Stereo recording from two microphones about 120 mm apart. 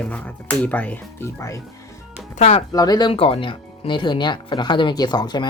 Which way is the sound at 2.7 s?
35° left (ahead or behind).